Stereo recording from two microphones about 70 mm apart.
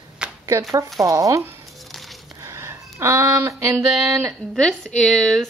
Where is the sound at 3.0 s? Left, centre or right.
Right.